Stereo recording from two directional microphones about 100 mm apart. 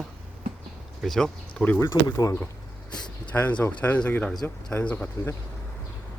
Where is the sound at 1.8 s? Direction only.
35° left (ahead or behind).